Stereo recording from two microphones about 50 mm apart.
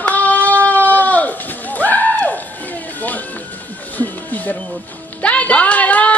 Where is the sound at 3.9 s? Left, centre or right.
Left.